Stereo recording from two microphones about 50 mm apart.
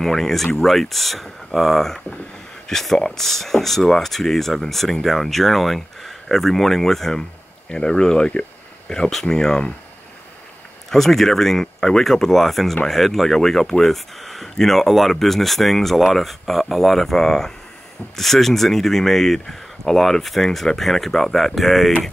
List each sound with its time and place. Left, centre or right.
0.0 s speech: centre
10.9 s speech: centre